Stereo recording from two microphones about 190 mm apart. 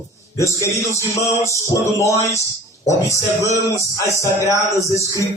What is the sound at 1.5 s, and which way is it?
Speech, 15° left (ahead or behind).